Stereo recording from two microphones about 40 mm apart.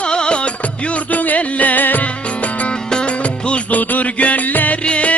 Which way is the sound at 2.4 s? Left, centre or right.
Left.